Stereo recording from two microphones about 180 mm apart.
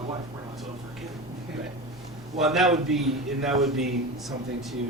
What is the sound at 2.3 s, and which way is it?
A man's voice, centre (ahead or behind).